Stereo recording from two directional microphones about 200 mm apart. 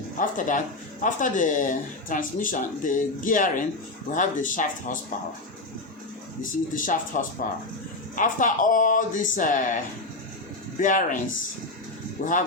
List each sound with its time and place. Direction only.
0.2 s speech: 40° left (ahead or behind)
6.4 s speech: 40° left (ahead or behind)
12.2 s speech: 40° left (ahead or behind)